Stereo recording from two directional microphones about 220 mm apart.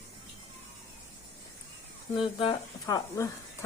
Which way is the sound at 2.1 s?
25° left (ahead or behind).